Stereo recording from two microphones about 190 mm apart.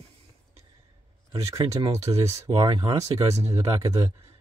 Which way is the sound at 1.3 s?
20° right (ahead or behind).